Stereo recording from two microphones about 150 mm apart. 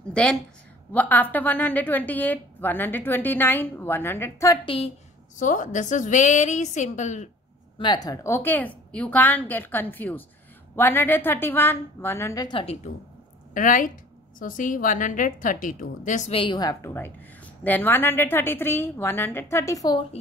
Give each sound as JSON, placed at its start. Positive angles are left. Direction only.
{"t": 0.1, "sound": "a woman's voice", "side_deg": 5}
{"t": 4.6, "sound": "a woman's voice", "side_deg": 40}
{"t": 5.4, "sound": "a woman's voice", "side_deg": 55}
{"t": 7.8, "sound": "a woman's voice", "side_deg": 30}
{"t": 12.5, "sound": "a woman's voice", "side_deg": 40}
{"t": 13.5, "sound": "a woman's voice", "side_deg": 60}
{"t": 16.3, "sound": "a woman's voice", "side_deg": 35}